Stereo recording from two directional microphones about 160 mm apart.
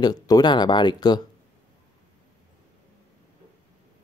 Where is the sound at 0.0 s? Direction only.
25° left (ahead or behind).